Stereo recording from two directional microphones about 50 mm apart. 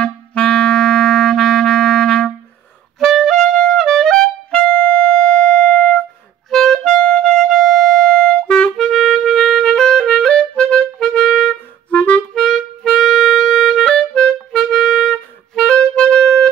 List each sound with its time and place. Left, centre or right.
0.0 s clarinet: left
3.0 s music: centre; by 5.9 s left
6.5 s music: centre
7.4 s clarinet: centre
9.2 s music: centre
9.8 s music: centre
10.0 s clarinet: centre
11.9 s clarinet: left
12.4 s music: centre
14.6 s music: centre